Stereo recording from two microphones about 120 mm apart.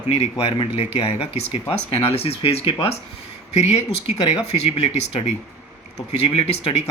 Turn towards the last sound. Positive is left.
turn(degrees=55)  # may be behind; listen again after turning